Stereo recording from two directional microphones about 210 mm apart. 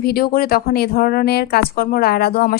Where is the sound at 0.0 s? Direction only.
45° left (ahead or behind).